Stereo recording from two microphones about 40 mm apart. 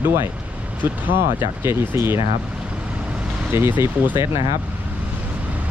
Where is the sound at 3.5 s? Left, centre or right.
Right.